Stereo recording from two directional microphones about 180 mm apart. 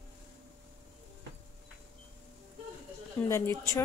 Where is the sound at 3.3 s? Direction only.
15° left (ahead or behind).